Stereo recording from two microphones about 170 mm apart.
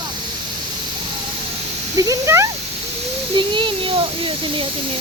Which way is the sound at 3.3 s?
30° right (ahead or behind).